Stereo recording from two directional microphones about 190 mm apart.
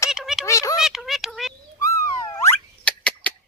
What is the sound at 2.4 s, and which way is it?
Rodents, 5° left (ahead or behind).